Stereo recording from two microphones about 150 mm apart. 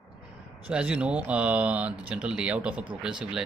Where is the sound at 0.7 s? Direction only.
10° right (ahead or behind).